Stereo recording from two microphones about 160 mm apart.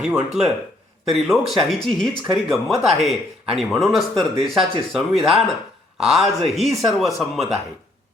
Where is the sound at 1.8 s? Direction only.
Centre (ahead or behind).